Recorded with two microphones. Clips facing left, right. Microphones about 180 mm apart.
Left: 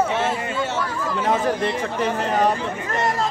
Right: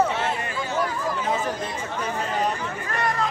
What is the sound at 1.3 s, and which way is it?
Speech, 80° left.